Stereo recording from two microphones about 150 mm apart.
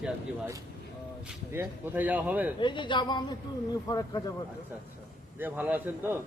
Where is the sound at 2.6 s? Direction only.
30° left (ahead or behind).